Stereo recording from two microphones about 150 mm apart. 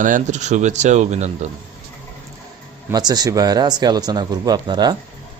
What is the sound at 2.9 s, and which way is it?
Speech, 25° right (ahead or behind).